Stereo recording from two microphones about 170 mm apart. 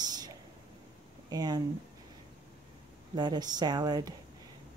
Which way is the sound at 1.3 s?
25° right (ahead or behind).